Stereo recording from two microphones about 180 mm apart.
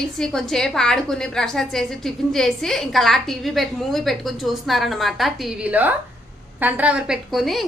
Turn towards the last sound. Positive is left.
turn(degrees=0)  # may be behind; listen again after turning